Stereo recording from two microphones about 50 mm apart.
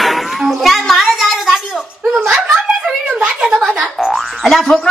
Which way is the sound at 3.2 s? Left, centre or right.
Centre.